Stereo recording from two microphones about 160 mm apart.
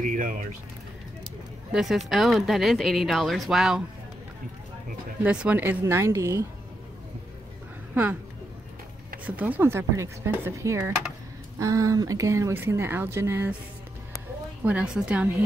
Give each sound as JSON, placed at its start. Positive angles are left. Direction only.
{"t": 0.0, "sound": "speech", "side_deg": -55}
{"t": 1.7, "sound": "speech", "side_deg": 0}
{"t": 5.2, "sound": "speech", "side_deg": -10}
{"t": 7.9, "sound": "speech", "side_deg": -10}
{"t": 9.2, "sound": "speech", "side_deg": -10}
{"t": 14.6, "sound": "speech", "side_deg": -10}